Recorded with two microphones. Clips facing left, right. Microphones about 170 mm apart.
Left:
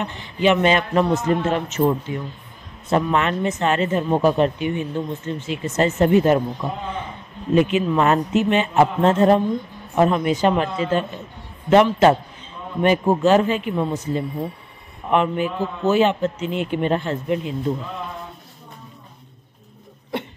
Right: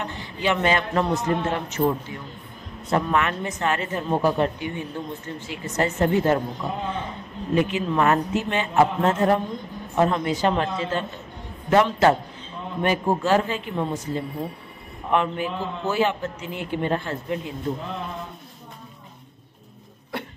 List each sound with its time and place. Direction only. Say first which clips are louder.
0.0 s speech: left 7 dB; 20° left (ahead or behind)
7.5 s speech: left 4 dB; 20° left (ahead or behind)